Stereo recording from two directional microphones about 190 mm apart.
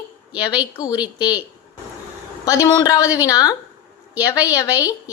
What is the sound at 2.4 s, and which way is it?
Speech, 20° left (ahead or behind).